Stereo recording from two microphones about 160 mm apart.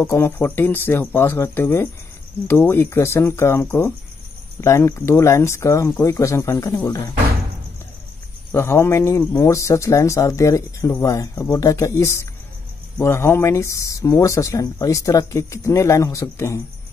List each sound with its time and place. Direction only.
0.0 s speech: 15° left (ahead or behind)
8.5 s speech: 15° left (ahead or behind)